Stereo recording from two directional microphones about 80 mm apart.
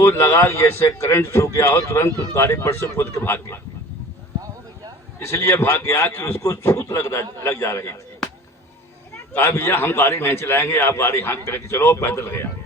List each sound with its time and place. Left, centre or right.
0.0 s a man's voice: left
5.2 s a man's voice: left
9.3 s a man's voice: left